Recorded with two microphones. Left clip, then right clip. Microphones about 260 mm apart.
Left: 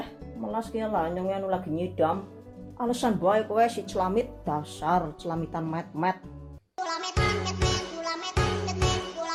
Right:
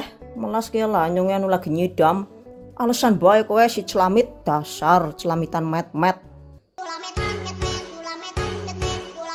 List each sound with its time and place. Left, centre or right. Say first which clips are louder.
0.4 s speech: right 8 dB; right
6.7 s music: even; centre